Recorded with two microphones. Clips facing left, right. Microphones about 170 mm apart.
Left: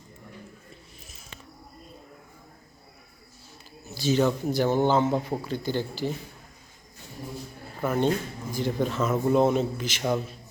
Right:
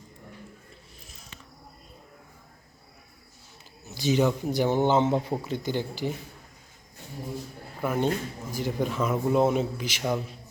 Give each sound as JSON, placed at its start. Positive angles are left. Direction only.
{"t": 3.8, "sound": "a man's voice", "side_deg": -20}
{"t": 7.9, "sound": "speech", "side_deg": -10}